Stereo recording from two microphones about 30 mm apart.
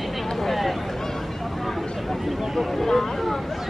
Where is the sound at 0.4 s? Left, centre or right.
Centre.